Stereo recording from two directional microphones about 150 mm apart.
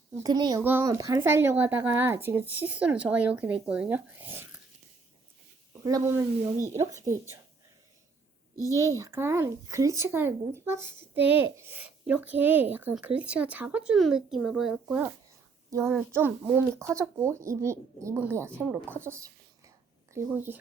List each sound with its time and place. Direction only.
0.2 s speech: 30° right (ahead or behind)
0.6 s speech: 15° right (ahead or behind)
5.8 s speech: 20° right (ahead or behind)
8.6 s speech: 20° right (ahead or behind)